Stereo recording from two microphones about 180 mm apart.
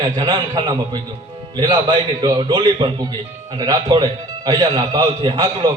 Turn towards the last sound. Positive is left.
turn(degrees=-25)  # may be behind; listen again after turning